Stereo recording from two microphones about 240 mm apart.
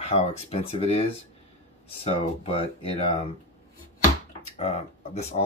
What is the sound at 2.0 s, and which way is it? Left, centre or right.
Speech, left.